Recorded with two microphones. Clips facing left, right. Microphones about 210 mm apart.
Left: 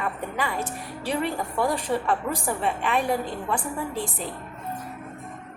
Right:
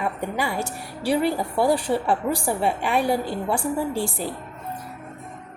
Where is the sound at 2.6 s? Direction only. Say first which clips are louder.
Right 3 dB; 10° right (ahead or behind).